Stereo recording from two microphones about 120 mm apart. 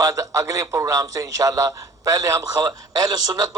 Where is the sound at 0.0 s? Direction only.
30° right (ahead or behind).